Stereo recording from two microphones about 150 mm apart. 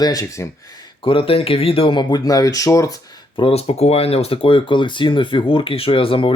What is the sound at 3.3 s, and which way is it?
Speech, 40° left (ahead or behind).